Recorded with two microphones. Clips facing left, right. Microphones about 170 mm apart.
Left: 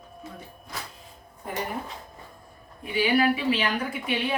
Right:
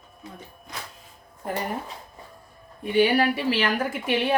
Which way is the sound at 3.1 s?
50° right (ahead or behind).